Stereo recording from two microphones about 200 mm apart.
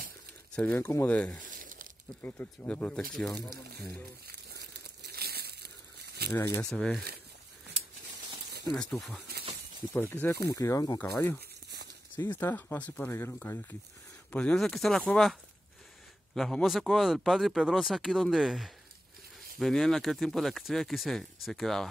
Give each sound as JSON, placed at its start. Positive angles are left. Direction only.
{"t": 0.6, "sound": "speech", "side_deg": 5}
{"t": 1.5, "sound": "crumpling", "side_deg": -40}
{"t": 2.2, "sound": "speech", "side_deg": 10}
{"t": 5.1, "sound": "crumpling", "side_deg": -50}
{"t": 6.3, "sound": "speech", "side_deg": 15}
{"t": 6.7, "sound": "speech", "side_deg": 0}
{"t": 8.7, "sound": "speech", "side_deg": 5}
{"t": 16.3, "sound": "speech", "side_deg": 0}